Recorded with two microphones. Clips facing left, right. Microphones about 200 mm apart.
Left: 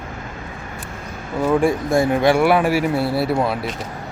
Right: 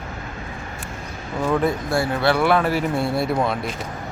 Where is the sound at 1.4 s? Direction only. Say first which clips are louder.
Left 4 dB; 10° left (ahead or behind).